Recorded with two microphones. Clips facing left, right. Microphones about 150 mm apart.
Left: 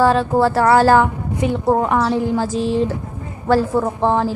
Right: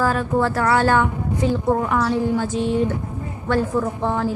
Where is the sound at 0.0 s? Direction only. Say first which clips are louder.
Left 5 dB; 30° left (ahead or behind).